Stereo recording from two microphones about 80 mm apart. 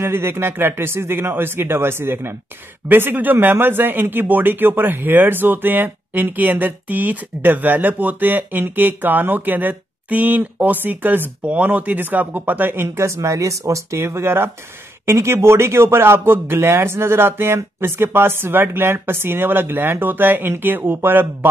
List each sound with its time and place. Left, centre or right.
0.0 s speech: right